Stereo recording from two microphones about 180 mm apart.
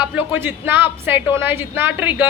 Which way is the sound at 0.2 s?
10° right (ahead or behind).